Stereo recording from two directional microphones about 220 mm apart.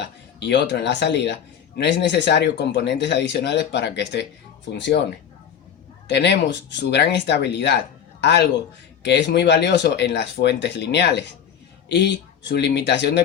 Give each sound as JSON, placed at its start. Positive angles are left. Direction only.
{"t": 0.0, "sound": "speech", "side_deg": 50}
{"t": 6.1, "sound": "speech", "side_deg": 50}